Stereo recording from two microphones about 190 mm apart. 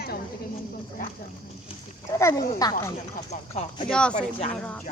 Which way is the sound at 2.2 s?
15° left (ahead or behind).